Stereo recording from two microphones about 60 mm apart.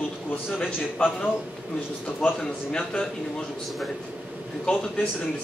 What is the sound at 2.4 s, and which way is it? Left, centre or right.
Speech, centre.